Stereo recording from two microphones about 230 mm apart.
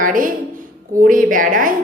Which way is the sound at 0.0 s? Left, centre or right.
Right.